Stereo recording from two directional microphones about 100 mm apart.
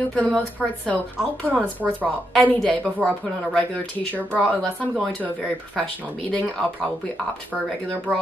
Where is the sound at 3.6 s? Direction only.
15° left (ahead or behind).